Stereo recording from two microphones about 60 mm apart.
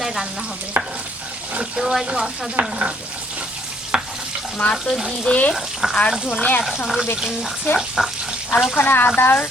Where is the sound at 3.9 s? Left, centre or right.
Centre.